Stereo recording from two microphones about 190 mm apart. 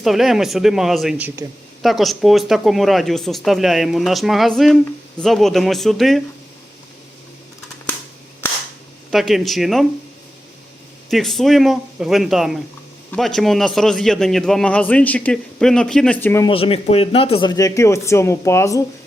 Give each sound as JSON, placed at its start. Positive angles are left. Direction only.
{"t": 0.0, "sound": "a man's voice", "side_deg": 0}
{"t": 9.0, "sound": "a man's voice", "side_deg": 0}
{"t": 11.1, "sound": "a man's voice", "side_deg": 0}
{"t": 16.5, "sound": "speech", "side_deg": 30}